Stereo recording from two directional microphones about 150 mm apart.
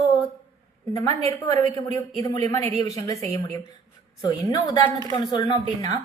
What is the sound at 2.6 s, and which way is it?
Speech, 45° right (ahead or behind).